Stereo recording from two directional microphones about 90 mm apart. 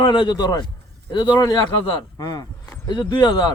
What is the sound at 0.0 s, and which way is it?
A man's voice, 60° left (ahead or behind).